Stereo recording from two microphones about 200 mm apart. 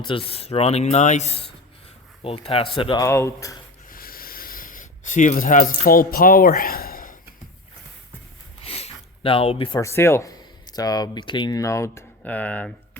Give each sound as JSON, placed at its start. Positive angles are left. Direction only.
{"t": 0.0, "sound": "speech", "side_deg": 25}
{"t": 3.0, "sound": "speech", "side_deg": 15}
{"t": 3.8, "sound": "a sound", "side_deg": 45}
{"t": 8.6, "sound": "speech", "side_deg": 30}